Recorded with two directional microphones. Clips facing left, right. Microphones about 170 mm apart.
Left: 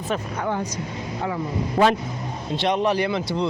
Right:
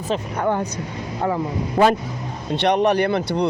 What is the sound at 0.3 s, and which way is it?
Speech, 55° right (ahead or behind).